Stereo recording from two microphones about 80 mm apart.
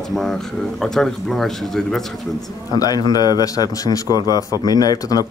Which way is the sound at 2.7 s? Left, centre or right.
Left.